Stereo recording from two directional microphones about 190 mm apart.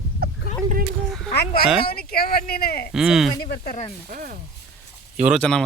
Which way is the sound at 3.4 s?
55° left (ahead or behind).